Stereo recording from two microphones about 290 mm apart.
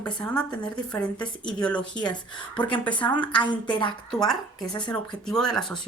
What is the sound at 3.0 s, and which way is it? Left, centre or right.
Speech, centre.